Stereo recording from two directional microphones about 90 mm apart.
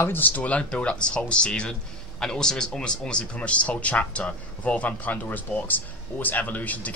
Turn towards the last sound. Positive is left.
turn(degrees=15)  # may be behind; listen again after turning